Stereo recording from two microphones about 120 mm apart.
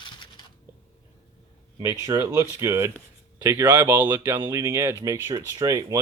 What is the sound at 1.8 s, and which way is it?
Speech, 25° right (ahead or behind).